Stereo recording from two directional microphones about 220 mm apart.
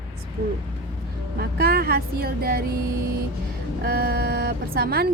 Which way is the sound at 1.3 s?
45° right (ahead or behind).